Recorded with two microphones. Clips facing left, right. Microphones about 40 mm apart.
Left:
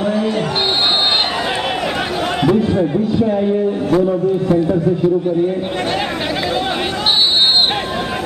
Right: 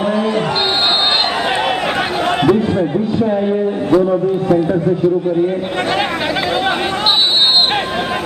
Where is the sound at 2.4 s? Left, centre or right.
Right.